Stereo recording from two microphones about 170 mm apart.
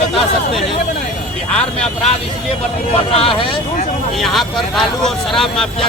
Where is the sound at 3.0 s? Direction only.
35° left (ahead or behind).